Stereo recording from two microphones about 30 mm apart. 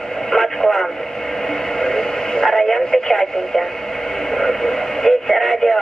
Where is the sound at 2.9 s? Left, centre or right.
Centre.